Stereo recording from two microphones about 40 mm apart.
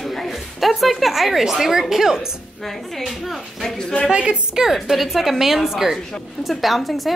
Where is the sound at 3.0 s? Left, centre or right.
Centre.